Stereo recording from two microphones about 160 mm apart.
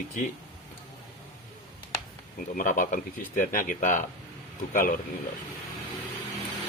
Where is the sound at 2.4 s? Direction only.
60° left (ahead or behind).